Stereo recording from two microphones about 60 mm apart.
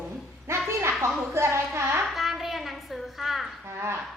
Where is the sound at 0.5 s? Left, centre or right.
Right.